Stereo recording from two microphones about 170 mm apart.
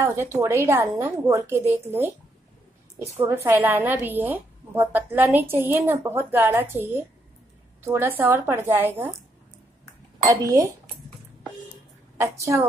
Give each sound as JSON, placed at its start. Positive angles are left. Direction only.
{"t": 0.0, "sound": "a woman's voice", "side_deg": -15}
{"t": 3.4, "sound": "a woman's voice", "side_deg": -10}
{"t": 10.2, "sound": "speech", "side_deg": -20}
{"t": 12.2, "sound": "a woman's voice", "side_deg": -15}